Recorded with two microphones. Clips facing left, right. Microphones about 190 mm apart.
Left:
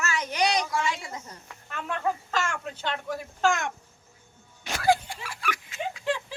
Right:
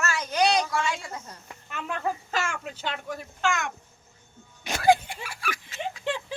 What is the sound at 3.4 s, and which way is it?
Speech, 35° left (ahead or behind).